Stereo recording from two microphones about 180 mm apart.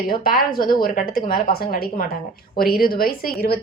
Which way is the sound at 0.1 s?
55° left (ahead or behind).